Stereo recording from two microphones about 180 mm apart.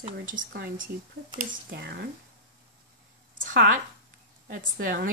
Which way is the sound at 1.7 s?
65° right (ahead or behind).